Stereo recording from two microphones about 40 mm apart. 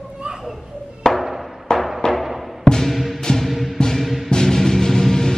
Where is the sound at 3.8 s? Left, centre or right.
Centre.